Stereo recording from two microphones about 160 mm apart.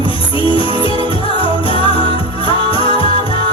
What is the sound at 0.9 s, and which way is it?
Music, 35° left (ahead or behind).